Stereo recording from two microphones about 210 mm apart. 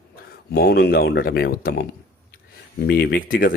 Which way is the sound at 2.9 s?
50° left (ahead or behind).